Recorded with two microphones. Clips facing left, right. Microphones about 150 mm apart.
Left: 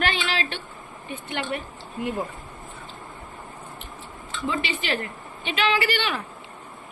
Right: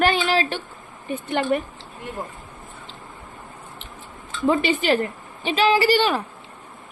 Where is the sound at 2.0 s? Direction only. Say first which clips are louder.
Left 7 dB; 10° left (ahead or behind).